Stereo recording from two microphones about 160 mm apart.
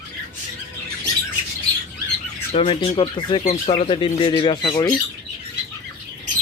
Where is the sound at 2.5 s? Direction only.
35° left (ahead or behind).